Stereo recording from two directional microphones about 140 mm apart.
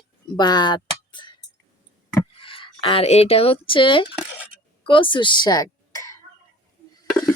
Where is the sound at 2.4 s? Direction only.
40° left (ahead or behind).